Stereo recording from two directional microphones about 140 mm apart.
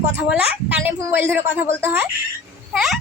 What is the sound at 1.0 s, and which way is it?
A child's voice, 15° right (ahead or behind).